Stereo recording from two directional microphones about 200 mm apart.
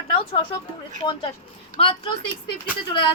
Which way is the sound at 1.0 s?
25° left (ahead or behind).